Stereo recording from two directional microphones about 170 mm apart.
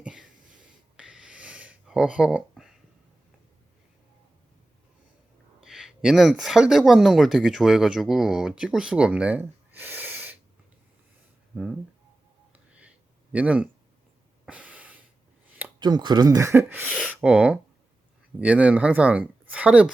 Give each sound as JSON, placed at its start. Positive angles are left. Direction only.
{"t": 0.0, "sound": "a sound", "side_deg": -5}
{"t": 5.6, "sound": "speech", "side_deg": 0}
{"t": 11.5, "sound": "speech", "side_deg": -5}
{"t": 13.3, "sound": "speech", "side_deg": -10}
{"t": 14.4, "sound": "snort", "side_deg": -10}
{"t": 15.8, "sound": "speech", "side_deg": -25}